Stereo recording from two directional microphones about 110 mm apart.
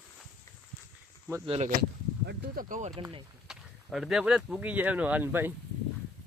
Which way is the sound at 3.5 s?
5° right (ahead or behind).